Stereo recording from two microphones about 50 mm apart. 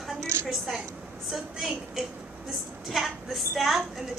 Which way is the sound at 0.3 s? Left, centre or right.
Right.